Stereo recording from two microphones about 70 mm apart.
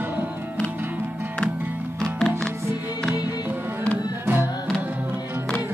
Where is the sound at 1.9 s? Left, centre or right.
Centre.